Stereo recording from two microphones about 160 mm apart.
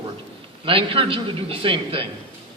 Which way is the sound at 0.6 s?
35° right (ahead or behind).